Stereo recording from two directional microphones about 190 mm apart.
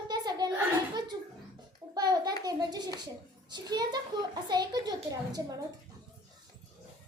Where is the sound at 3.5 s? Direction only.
20° right (ahead or behind).